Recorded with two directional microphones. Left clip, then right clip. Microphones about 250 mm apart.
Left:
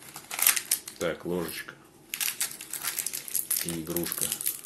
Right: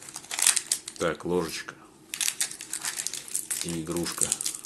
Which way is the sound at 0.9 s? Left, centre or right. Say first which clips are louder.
Right 4 dB; right.